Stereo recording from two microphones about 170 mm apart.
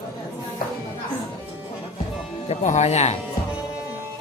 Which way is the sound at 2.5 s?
40° left (ahead or behind).